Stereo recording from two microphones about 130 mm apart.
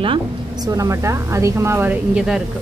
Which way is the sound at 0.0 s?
40° right (ahead or behind).